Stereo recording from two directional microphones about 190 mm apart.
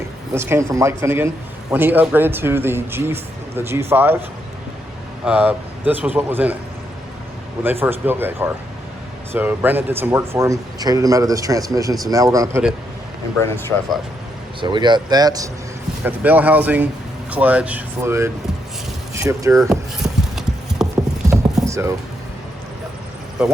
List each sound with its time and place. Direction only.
0.3 s speech: 15° right (ahead or behind)
5.2 s speech: 5° right (ahead or behind)
7.6 s speech: 10° right (ahead or behind)
14.6 s speech: 25° right (ahead or behind)
16.0 s speech: 10° right (ahead or behind)
20.0 s clip-clop: centre (ahead or behind)
21.2 s clip-clop: 15° right (ahead or behind)